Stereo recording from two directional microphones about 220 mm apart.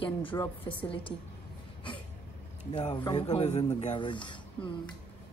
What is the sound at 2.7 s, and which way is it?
A woman's voice, 20° left (ahead or behind).